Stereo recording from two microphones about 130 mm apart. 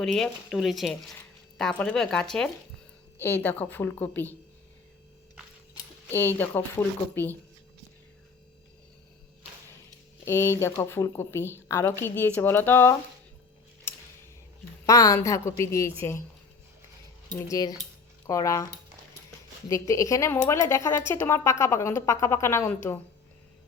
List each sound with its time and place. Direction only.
0.0 s speech: 5° left (ahead or behind)
3.2 s a woman's voice: 15° left (ahead or behind)
6.1 s a woman's voice: 15° left (ahead or behind)
10.2 s a woman's voice: 20° left (ahead or behind)
13.9 s a sound: 15° left (ahead or behind)
14.8 s a woman's voice: 25° left (ahead or behind)
17.5 s a woman's voice: 30° left (ahead or behind)